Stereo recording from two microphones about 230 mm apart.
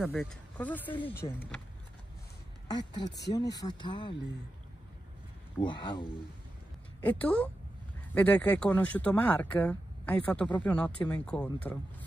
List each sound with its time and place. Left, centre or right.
0.1 s speech: centre
1.2 s speech: left
2.7 s speech: centre
3.1 s speech: left
3.5 s speech: centre
5.6 s speech: left
7.0 s speech: centre